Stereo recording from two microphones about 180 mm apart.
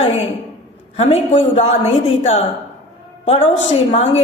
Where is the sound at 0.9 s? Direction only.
35° left (ahead or behind).